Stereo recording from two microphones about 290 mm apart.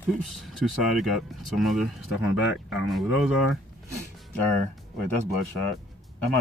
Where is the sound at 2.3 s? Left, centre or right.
Left.